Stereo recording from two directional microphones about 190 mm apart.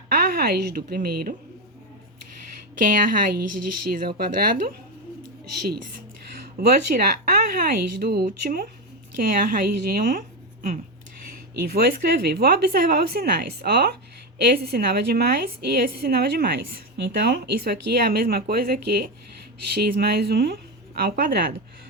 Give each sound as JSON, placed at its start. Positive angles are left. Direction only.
{"t": 0.1, "sound": "a woman's voice", "side_deg": -55}
{"t": 2.7, "sound": "a woman's voice", "side_deg": -45}